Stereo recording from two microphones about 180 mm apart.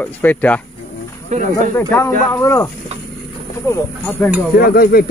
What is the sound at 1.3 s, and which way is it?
Speech, 40° right (ahead or behind).